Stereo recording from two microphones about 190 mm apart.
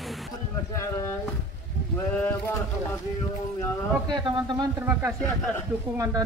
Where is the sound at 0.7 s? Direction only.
15° left (ahead or behind).